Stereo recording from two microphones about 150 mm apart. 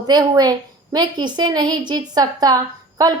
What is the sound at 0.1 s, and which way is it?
A woman's voice, 25° right (ahead or behind).